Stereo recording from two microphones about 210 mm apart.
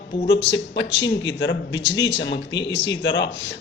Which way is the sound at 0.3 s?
55° left (ahead or behind).